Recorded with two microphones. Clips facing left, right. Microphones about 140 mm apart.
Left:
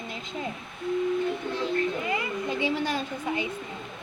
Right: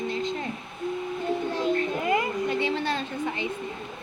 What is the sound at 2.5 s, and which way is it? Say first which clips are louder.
Speech: left 3 dB; 10° left (ahead or behind).